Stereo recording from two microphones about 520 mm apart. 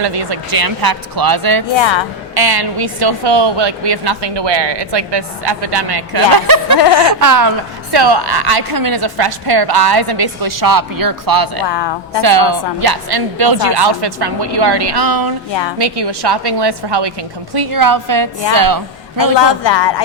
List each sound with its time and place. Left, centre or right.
0.0 s a woman's voice: right
1.7 s a woman's voice: left
2.3 s a woman's voice: right
6.7 s speech: left
7.2 s a woman's voice: right
11.6 s speech: left
12.2 s a woman's voice: right
19.4 s speech: left